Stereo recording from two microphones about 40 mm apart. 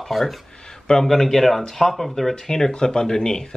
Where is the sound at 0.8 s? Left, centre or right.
Centre.